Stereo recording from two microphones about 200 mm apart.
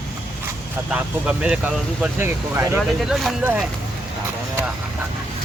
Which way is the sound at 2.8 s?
Centre (ahead or behind).